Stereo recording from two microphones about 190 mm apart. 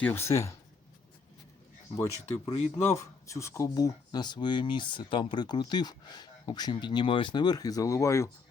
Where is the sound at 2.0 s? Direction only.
15° left (ahead or behind).